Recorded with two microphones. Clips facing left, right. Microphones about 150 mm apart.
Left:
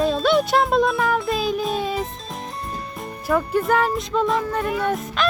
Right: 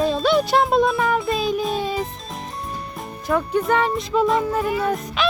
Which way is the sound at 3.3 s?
Centre (ahead or behind).